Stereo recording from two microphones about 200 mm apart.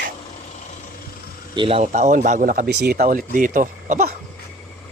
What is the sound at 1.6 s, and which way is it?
Speech, 30° right (ahead or behind).